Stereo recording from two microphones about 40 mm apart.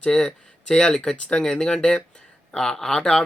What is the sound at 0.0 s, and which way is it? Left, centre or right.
Speech, left.